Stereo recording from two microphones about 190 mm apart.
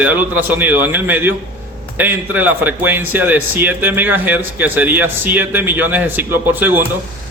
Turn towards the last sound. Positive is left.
turn(degrees=-10)  # may be behind; listen again after turning